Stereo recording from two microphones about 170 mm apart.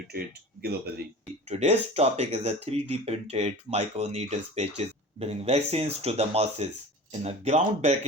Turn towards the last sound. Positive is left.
turn(degrees=-40)  # may be behind; listen again after turning